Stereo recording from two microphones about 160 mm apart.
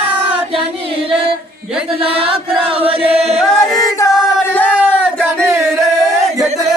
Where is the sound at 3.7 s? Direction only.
20° left (ahead or behind).